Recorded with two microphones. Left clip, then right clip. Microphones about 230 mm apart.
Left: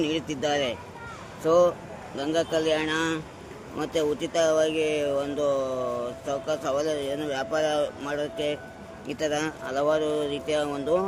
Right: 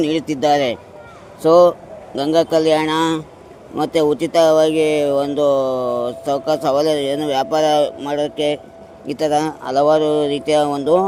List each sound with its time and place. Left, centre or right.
0.0 s speech: right